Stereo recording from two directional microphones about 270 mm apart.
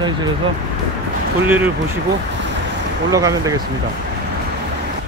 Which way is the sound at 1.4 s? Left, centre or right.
Centre.